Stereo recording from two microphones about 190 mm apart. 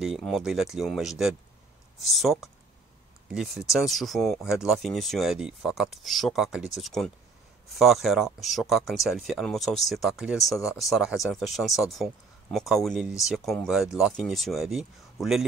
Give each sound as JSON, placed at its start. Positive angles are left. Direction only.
{"t": 0.0, "sound": "speech", "side_deg": 0}